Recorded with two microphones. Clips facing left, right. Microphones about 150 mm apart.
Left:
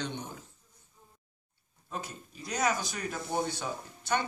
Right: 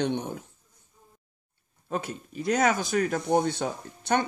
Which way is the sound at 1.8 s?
60° right (ahead or behind).